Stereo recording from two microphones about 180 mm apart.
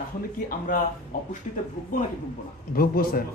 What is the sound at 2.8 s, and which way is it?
Speech, 55° left (ahead or behind).